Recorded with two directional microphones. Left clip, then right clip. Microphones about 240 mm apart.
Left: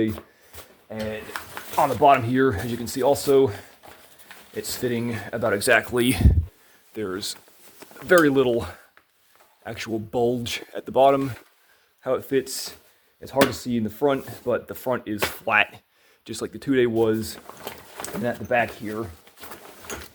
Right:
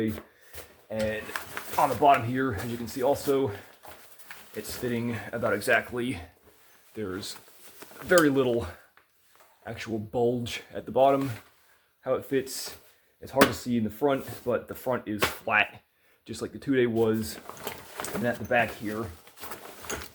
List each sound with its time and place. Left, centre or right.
0.9 s speech: centre
1.7 s speech: left
4.5 s speech: left
17.4 s a sound: centre
18.0 s speech: left
19.2 s a sound: centre